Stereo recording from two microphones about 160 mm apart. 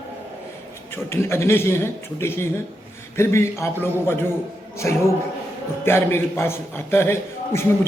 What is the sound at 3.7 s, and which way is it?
Speech, 15° right (ahead or behind).